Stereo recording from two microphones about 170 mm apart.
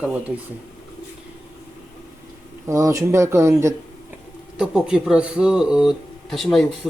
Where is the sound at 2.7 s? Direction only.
20° right (ahead or behind).